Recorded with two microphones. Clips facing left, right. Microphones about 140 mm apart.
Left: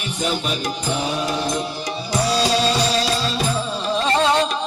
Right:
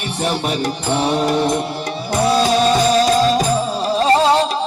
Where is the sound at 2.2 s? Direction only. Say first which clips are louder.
Right 5 dB; 55° right (ahead or behind).